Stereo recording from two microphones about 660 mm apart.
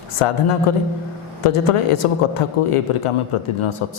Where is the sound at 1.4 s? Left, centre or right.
Left.